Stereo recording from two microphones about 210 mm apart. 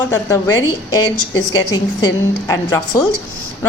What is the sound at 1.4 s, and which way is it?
A woman's voice, 15° left (ahead or behind).